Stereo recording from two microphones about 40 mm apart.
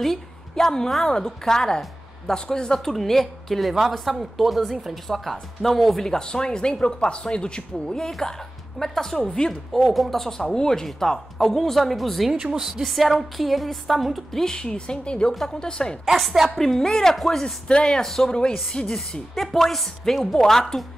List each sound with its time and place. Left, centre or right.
0.0 s a woman's voice: centre
6.0 s a woman's voice: centre
9.8 s a woman's voice: centre
12.3 s speech: right
12.5 s speech: centre
14.3 s speech: centre
15.3 s a woman's voice: centre
16.1 s speech: centre
16.4 s a woman's voice: centre
17.6 s a woman's voice: left